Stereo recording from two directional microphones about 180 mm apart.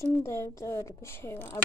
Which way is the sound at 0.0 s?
15° left (ahead or behind).